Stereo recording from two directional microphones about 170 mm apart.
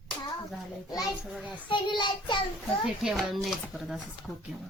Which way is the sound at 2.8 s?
5° right (ahead or behind).